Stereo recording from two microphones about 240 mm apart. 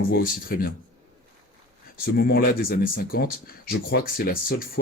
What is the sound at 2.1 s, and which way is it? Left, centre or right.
Speech, left.